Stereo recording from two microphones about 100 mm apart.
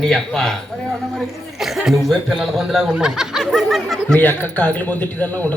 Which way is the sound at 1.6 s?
5° right (ahead or behind).